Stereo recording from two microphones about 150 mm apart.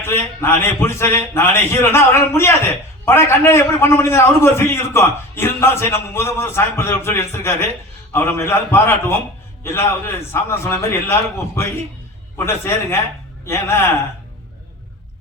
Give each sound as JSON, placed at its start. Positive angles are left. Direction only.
{"t": 0.0, "sound": "a man's voice", "side_deg": 15}